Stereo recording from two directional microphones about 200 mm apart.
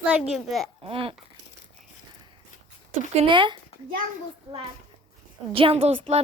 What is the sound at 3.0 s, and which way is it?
Speech, 30° right (ahead or behind).